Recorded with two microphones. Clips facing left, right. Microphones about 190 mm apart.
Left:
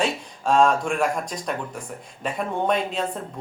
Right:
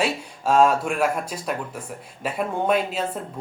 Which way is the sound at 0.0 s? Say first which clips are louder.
Right 1 dB; 5° right (ahead or behind).